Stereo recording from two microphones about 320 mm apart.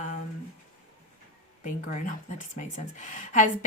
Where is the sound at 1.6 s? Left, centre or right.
Left.